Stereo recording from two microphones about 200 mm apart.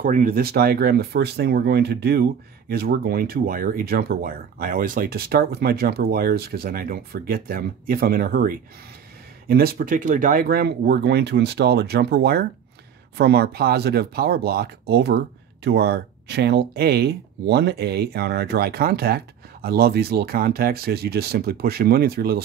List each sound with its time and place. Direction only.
0.0 s speech: 45° right (ahead or behind)